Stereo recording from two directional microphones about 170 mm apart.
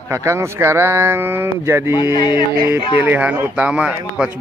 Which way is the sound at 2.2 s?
25° left (ahead or behind).